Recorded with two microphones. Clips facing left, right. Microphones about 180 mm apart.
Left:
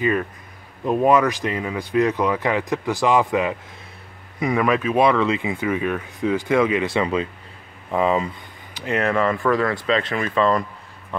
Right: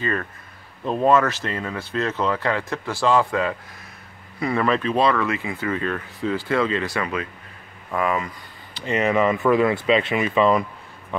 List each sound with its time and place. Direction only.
0.0 s speech: 15° left (ahead or behind)
8.7 s speech: centre (ahead or behind)